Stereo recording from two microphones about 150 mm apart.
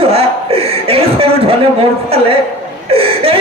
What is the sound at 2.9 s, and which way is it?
Speech, 40° right (ahead or behind).